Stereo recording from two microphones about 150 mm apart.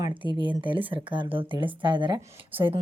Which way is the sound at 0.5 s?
35° right (ahead or behind).